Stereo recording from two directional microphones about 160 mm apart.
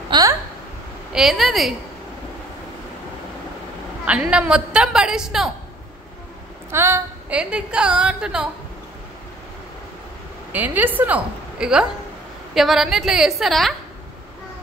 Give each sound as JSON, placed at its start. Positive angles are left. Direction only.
{"t": 0.1, "sound": "a sound", "side_deg": -25}
{"t": 1.1, "sound": "a woman's voice", "side_deg": 0}
{"t": 4.0, "sound": "a woman's voice", "side_deg": -5}
{"t": 6.7, "sound": "a woman's voice", "side_deg": -15}
{"t": 10.5, "sound": "a woman's voice", "side_deg": -10}